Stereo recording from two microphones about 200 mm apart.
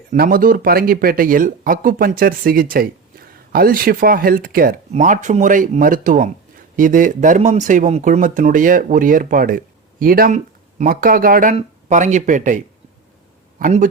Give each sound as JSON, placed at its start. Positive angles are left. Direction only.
{"t": 0.1, "sound": "speech", "side_deg": -45}